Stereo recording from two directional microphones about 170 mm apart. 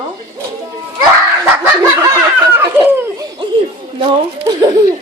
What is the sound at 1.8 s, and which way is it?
Laughter, 20° right (ahead or behind).